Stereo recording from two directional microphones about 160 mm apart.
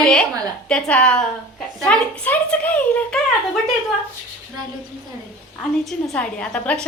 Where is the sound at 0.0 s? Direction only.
5° left (ahead or behind).